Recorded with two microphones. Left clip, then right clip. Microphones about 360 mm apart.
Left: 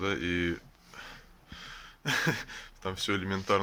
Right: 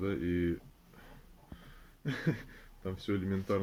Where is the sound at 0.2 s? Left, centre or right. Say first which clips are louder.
Left 3 dB; left.